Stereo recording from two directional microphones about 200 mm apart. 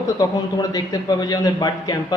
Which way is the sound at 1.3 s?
20° left (ahead or behind).